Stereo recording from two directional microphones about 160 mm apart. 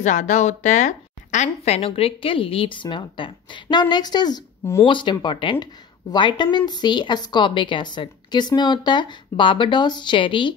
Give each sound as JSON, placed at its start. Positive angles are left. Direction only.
{"t": 0.0, "sound": "a woman's voice", "side_deg": 50}